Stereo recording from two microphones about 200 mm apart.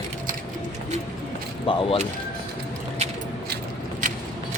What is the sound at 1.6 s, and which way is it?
Speech, 25° left (ahead or behind).